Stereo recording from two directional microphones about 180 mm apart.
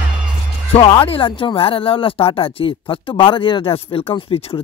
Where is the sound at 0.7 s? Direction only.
30° left (ahead or behind).